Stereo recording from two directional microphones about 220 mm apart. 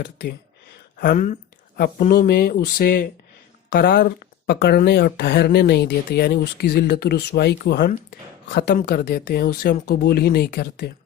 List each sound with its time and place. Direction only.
0.0 s speech: 50° left (ahead or behind)
0.9 s speech: 40° left (ahead or behind)